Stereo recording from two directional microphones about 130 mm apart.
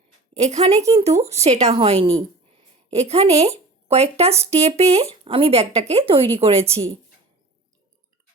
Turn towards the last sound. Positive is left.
turn(degrees=-45)  # may be behind; listen again after turning